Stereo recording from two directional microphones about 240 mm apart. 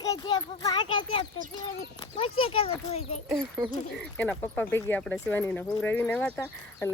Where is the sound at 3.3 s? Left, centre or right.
Centre.